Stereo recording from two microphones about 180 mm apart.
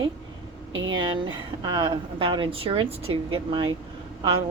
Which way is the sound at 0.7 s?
90° right.